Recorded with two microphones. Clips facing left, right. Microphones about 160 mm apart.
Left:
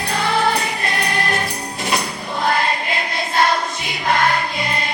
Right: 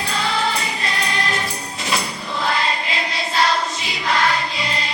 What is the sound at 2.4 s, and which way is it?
Choir, 50° left (ahead or behind).